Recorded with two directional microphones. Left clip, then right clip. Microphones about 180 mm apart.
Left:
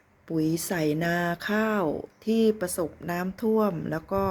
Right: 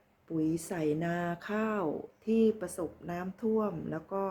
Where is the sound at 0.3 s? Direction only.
50° left (ahead or behind).